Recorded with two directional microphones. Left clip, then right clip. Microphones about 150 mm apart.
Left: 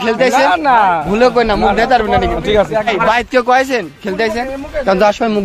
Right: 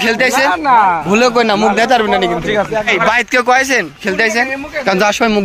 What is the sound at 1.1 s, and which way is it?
A man's voice, 30° right (ahead or behind).